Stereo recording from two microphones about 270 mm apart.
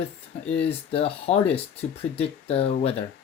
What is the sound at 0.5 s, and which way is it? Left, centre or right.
Speech, left.